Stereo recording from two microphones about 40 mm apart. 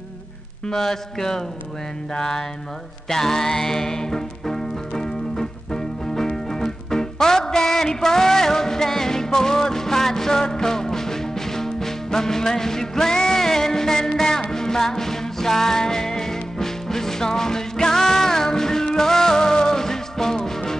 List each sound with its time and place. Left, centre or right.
0.7 s speech: centre
3.1 s music: centre